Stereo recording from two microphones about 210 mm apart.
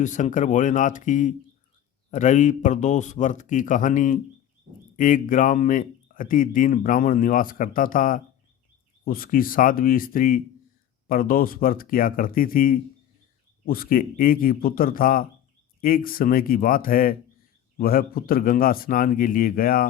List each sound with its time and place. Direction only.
0.0 s a man's voice: 35° left (ahead or behind)